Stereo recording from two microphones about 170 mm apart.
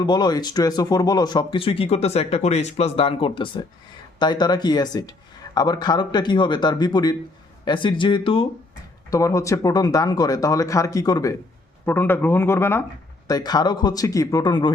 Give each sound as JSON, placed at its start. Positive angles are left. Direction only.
{"t": 0.0, "sound": "speech", "side_deg": 25}
{"t": 9.0, "sound": "speech", "side_deg": 20}